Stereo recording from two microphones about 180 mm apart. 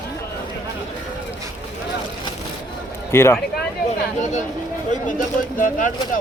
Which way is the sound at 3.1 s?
15° left (ahead or behind).